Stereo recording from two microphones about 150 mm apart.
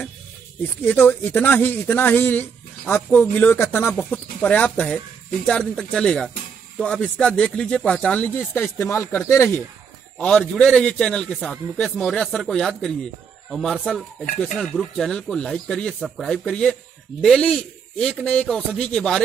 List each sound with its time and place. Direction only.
0.6 s speech: 10° left (ahead or behind)
10.1 s speech: 5° left (ahead or behind)